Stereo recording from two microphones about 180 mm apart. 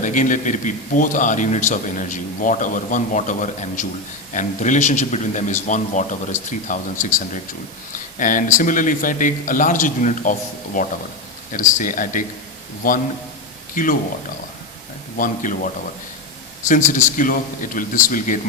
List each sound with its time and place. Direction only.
0.0 s a man's voice: 45° left (ahead or behind)
8.2 s a man's voice: 45° left (ahead or behind)
15.2 s a man's voice: 45° left (ahead or behind)
16.6 s a man's voice: 45° left (ahead or behind)